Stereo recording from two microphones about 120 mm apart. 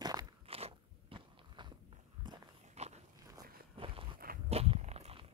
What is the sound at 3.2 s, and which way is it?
Walk, 30° right (ahead or behind).